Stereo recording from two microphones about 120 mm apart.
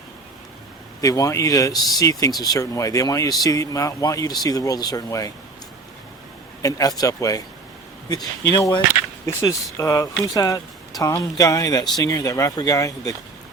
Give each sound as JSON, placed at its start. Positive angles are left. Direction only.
{"t": 1.0, "sound": "speech", "side_deg": 30}
{"t": 6.6, "sound": "speech", "side_deg": 30}